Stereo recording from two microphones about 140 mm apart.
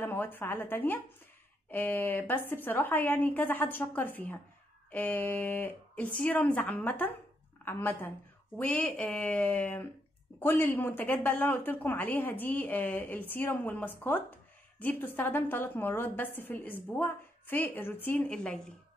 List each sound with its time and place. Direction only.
0.0 s a woman's voice: 15° left (ahead or behind)